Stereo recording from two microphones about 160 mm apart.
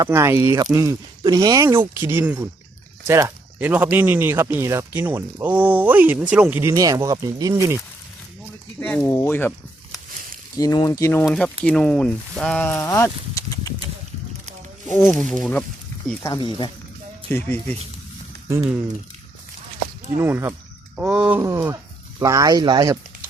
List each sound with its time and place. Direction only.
0.0 s speech: 15° right (ahead or behind)
8.8 s speech: 10° left (ahead or behind)
10.6 s speech: 20° left (ahead or behind)
11.3 s speech: centre (ahead or behind); by 13.7 s 20° left (ahead or behind)
15.0 s speech: 5° left (ahead or behind)
16.2 s speech: 25° left (ahead or behind)
20.1 s speech: 15° right (ahead or behind)